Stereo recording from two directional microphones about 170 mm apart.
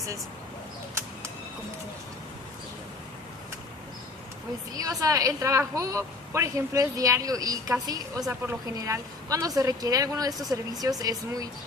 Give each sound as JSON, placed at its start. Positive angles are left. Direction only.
{"t": 4.7, "sound": "a woman's voice", "side_deg": -20}